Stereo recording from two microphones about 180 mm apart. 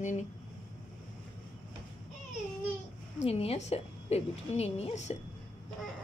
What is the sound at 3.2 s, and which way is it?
A woman's voice, 35° left (ahead or behind).